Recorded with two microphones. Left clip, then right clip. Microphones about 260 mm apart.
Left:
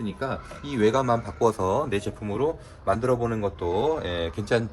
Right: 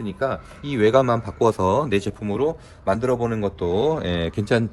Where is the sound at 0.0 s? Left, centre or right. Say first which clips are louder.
Right 6 dB; centre.